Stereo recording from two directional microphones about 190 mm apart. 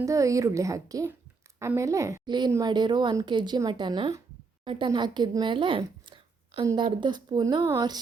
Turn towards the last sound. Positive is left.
turn(degrees=-20)  # may be behind; listen again after turning